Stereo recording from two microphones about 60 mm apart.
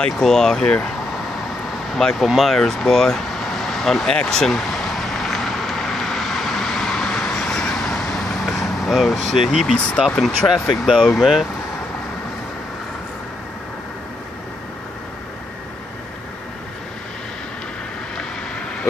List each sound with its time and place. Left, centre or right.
0.2 s speech: centre
2.0 s speech: centre
2.2 s vehicle: centre
9.7 s speech: centre
10.4 s speech: left
10.9 s speech: centre